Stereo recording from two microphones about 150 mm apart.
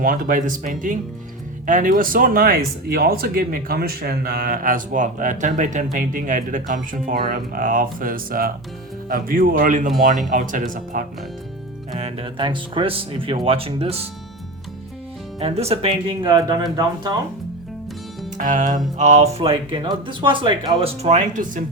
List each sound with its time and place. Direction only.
0.0 s speech: 65° right (ahead or behind)
11.9 s speech: 45° right (ahead or behind)
15.4 s speech: 40° right (ahead or behind); by 17.2 s 25° right (ahead or behind)
18.3 s speech: 55° right (ahead or behind)
19.4 s speech: 35° right (ahead or behind); by 21.6 s 55° right (ahead or behind)